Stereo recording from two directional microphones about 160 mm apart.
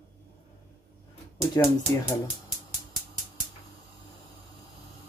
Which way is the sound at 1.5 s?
20° left (ahead or behind).